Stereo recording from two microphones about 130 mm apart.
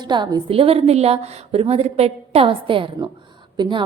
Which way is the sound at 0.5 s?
50° right (ahead or behind).